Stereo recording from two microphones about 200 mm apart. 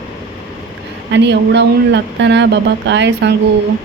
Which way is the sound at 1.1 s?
60° right (ahead or behind).